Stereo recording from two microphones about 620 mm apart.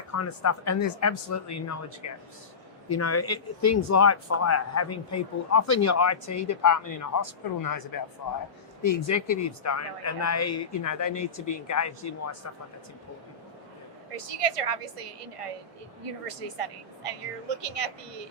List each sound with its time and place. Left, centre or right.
0.1 s speech: left
8.9 s speech: left
14.2 s speech: right